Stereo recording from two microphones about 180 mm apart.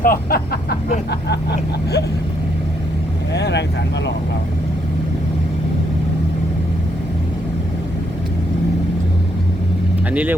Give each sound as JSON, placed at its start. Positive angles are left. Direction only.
{"t": 0.0, "sound": "speech", "side_deg": 55}
{"t": 3.3, "sound": "speech", "side_deg": 70}
{"t": 10.1, "sound": "speech", "side_deg": -10}